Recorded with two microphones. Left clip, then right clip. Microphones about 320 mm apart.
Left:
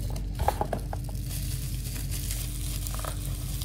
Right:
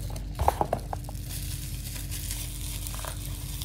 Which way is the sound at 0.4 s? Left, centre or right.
Right.